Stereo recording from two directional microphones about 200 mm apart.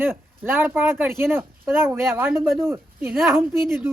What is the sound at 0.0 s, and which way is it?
A woman's voice, 10° right (ahead or behind).